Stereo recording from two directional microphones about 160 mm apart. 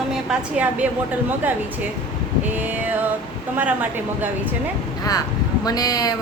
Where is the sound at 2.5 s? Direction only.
10° right (ahead or behind).